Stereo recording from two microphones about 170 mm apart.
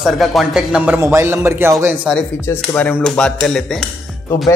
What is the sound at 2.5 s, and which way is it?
A man's voice, 10° left (ahead or behind).